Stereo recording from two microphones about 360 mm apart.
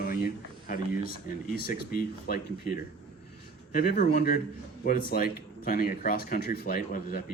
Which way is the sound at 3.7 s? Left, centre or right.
Left.